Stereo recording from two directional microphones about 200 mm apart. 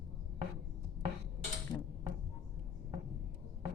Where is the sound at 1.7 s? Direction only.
15° left (ahead or behind).